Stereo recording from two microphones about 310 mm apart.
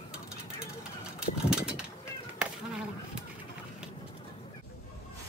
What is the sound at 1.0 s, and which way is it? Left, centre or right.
Vehicle, centre.